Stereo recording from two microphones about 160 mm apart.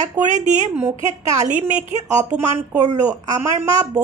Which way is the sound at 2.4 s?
15° right (ahead or behind).